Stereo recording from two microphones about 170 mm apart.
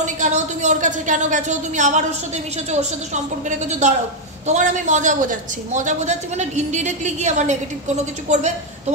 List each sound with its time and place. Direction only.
0.0 s a man's voice: 45° right (ahead or behind)